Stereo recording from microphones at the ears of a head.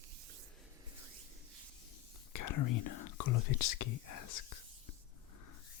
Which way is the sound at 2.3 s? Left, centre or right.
Left.